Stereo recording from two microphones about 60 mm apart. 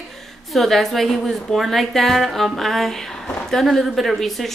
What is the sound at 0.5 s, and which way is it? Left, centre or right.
A woman's voice, centre.